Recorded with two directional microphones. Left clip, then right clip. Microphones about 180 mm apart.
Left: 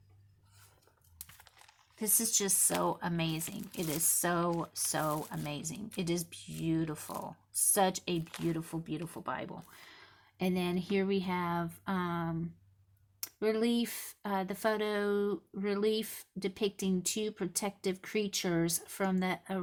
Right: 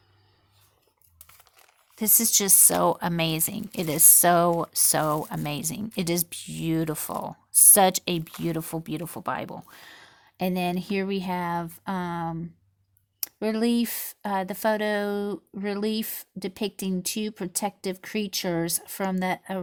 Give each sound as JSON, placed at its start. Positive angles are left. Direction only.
{"t": 2.0, "sound": "speech", "side_deg": -55}